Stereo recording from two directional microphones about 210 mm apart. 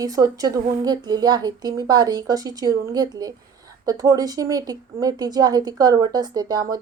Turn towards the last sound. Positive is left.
turn(degrees=-20)  # may be behind; listen again after turning